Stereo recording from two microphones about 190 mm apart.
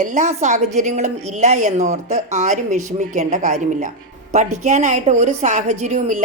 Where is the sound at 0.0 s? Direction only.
40° right (ahead or behind).